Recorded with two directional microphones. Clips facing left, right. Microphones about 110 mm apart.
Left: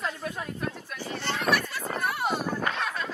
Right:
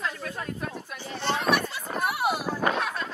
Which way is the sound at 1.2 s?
20° right (ahead or behind).